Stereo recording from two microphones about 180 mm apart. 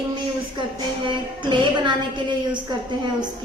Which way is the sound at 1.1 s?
25° right (ahead or behind).